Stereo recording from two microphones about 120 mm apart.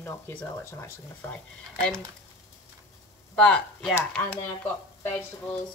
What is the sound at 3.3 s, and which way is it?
Speech, 5° left (ahead or behind).